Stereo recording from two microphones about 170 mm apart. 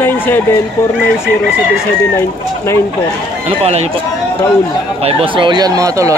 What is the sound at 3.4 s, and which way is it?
Speech, 40° right (ahead or behind).